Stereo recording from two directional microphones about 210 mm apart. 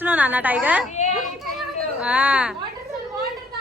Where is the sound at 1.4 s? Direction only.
5° right (ahead or behind).